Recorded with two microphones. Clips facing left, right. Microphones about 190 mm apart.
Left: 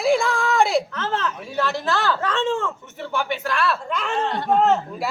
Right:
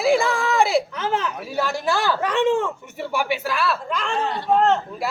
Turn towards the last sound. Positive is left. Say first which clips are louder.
# even
turn(degrees=5)  # may be behind; listen again after turning